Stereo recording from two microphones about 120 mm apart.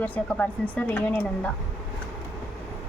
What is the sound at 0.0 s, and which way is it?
A woman's voice, 10° left (ahead or behind).